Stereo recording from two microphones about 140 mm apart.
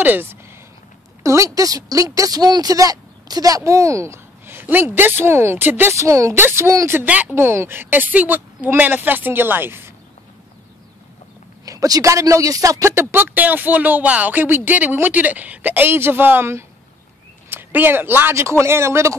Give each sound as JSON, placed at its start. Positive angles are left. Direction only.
{"t": 0.0, "sound": "speech", "side_deg": -15}
{"t": 11.6, "sound": "speech", "side_deg": -25}